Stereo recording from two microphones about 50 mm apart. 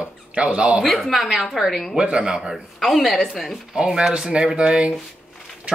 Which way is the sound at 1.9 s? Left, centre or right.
Centre.